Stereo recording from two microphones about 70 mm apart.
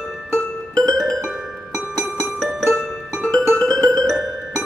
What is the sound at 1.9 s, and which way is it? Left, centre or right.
Music, right.